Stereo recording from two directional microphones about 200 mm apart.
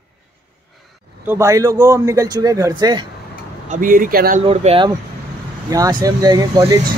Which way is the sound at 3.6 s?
40° right (ahead or behind).